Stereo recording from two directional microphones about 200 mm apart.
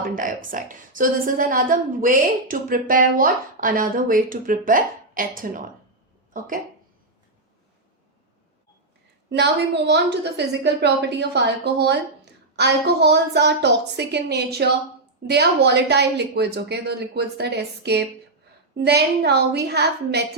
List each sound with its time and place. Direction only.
0.0 s a woman's voice: 40° right (ahead or behind)
9.3 s a woman's voice: 60° right (ahead or behind)